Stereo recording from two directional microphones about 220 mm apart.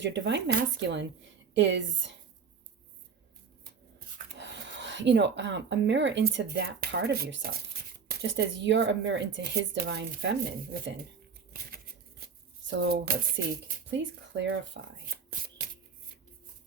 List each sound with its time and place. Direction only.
0.0 s speech: 55° right (ahead or behind)
4.4 s speech: 55° right (ahead or behind)
12.6 s speech: 50° right (ahead or behind)